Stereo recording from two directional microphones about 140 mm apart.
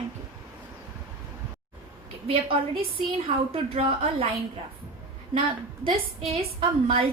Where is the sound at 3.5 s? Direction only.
45° right (ahead or behind).